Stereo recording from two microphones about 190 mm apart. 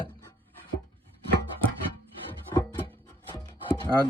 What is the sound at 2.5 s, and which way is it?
Music, 20° left (ahead or behind).